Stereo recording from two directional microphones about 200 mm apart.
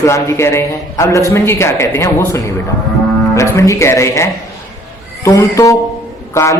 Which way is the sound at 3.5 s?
15° left (ahead or behind).